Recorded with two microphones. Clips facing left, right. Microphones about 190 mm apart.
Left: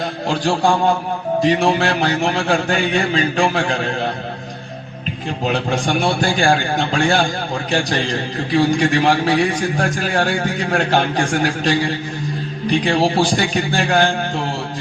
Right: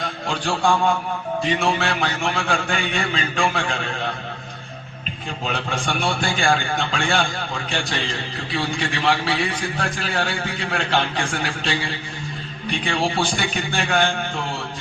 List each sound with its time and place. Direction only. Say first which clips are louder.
0.3 s a man's voice: left 4 dB; 40° left (ahead or behind)
5.5 s a man's voice: left 7 dB; 35° left (ahead or behind)